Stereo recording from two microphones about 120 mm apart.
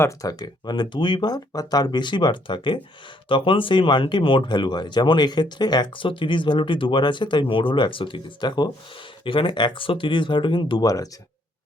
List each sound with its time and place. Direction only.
0.0 s speech: 30° left (ahead or behind)